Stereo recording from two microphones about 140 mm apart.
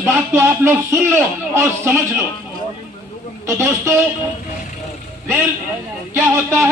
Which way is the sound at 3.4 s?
20° right (ahead or behind).